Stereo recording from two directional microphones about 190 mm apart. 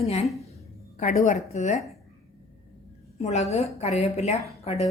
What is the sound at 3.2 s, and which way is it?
A woman's voice, 35° left (ahead or behind).